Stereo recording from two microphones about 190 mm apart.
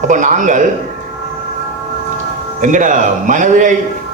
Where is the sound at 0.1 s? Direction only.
40° right (ahead or behind).